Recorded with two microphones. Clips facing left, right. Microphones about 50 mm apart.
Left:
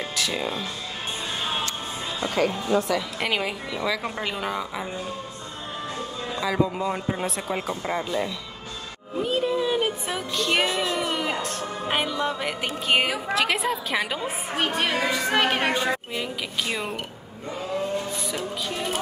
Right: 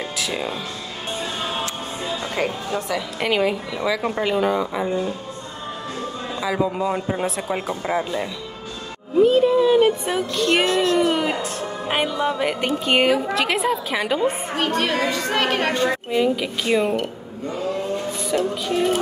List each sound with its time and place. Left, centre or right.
0.2 s speech: centre
2.9 s a woman's voice: centre
6.4 s a woman's voice: centre
11.0 s a woman's voice: centre
14.2 s a woman's voice: centre
16.1 s a woman's voice: centre
18.2 s a woman's voice: centre